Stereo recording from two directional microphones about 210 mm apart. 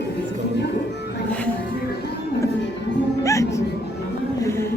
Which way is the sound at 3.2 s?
15° left (ahead or behind).